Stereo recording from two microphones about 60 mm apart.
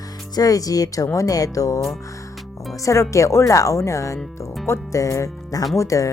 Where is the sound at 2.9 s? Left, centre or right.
Left.